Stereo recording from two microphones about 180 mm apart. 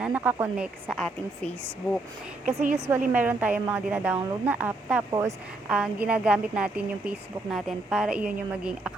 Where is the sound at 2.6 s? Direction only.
35° right (ahead or behind).